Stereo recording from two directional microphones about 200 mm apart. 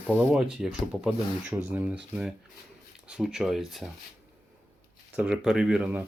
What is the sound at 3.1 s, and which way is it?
Speech, 5° right (ahead or behind).